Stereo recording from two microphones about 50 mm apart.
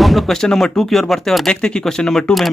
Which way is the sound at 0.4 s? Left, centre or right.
Centre.